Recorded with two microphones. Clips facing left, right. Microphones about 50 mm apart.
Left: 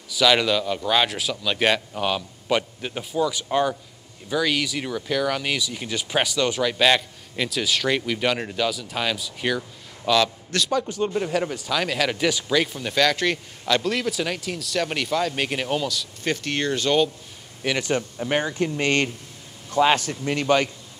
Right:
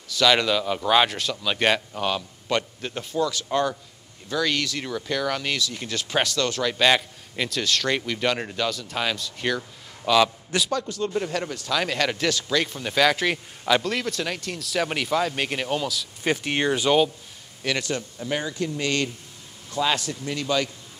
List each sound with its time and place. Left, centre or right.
0.1 s speech: centre
10.7 s speech: centre
11.8 s speech: centre
12.3 s speech: centre
16.3 s speech: centre
17.8 s speech: left